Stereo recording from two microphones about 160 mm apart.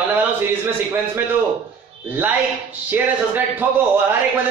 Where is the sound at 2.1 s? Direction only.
10° right (ahead or behind).